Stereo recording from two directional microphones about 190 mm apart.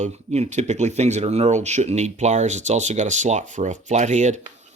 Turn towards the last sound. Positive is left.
turn(degrees=-40)  # may be behind; listen again after turning